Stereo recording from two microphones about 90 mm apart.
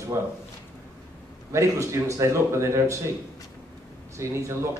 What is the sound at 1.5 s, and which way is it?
A man's voice, 35° right (ahead or behind).